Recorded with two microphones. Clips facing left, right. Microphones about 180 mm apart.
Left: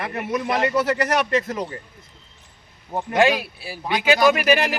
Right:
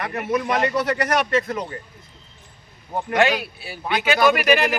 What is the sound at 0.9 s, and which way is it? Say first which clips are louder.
Speech: even; 25° left (ahead or behind).